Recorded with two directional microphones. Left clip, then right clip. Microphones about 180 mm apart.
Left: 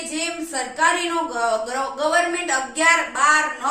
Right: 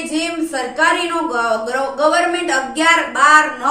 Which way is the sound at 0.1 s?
15° left (ahead or behind).